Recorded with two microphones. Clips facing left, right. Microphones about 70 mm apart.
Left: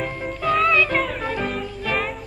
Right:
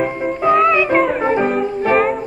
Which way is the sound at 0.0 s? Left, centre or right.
Right.